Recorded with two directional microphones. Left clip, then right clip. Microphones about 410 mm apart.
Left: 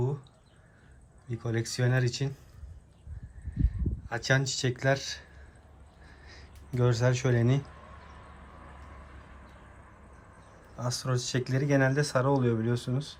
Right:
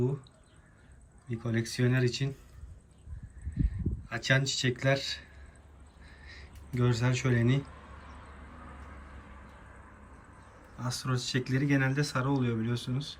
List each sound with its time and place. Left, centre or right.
1.3 s speech: centre
3.6 s speech: centre
6.3 s speech: centre
10.8 s speech: centre